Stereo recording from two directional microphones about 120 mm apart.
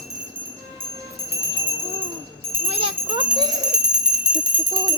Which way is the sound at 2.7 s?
50° right (ahead or behind).